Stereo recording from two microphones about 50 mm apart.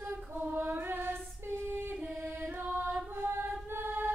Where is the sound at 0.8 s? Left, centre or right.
Right.